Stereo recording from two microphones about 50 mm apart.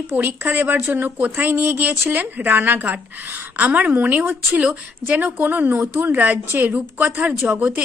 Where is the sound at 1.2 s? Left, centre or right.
Right.